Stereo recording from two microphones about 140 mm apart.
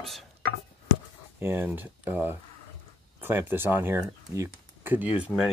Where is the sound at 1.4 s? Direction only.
15° right (ahead or behind).